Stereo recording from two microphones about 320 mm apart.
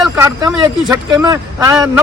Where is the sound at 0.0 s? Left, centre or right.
Centre.